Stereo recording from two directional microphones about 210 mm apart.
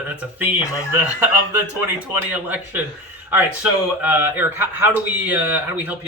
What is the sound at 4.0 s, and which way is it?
Speech, 10° right (ahead or behind).